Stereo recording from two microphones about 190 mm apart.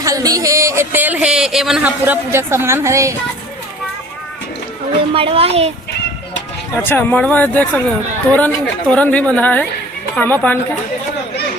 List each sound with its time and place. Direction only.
0.0 s speech: 20° right (ahead or behind)
5.1 s a woman's voice: 30° right (ahead or behind)
6.7 s speech: 10° left (ahead or behind)